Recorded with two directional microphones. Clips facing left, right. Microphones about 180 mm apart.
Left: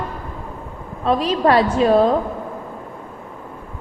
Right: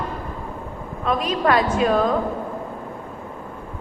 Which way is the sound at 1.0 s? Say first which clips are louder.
Left 4 dB; 30° left (ahead or behind).